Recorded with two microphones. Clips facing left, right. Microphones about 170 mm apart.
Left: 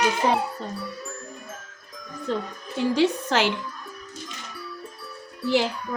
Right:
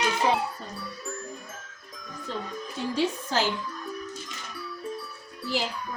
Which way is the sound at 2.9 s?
80° left.